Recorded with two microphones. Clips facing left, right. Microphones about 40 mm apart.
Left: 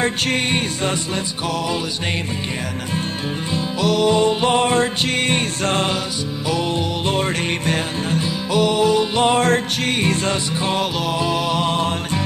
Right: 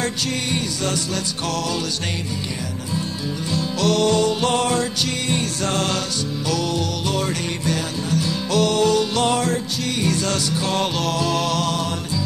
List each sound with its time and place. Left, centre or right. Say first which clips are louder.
0.2 s music: left 4 dB; left
3.8 s mantra: left 2 dB; centre
4.2 s music: left 3 dB; left
8.2 s music: left 1 dB; centre
9.4 s music: left 5 dB; left
10.3 s music: left 1 dB; left
10.8 s mantra: left 1 dB; centre